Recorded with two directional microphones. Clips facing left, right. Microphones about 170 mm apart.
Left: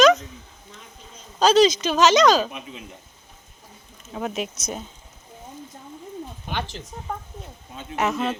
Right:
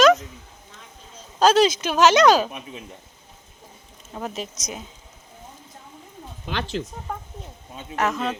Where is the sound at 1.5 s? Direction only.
55° right (ahead or behind).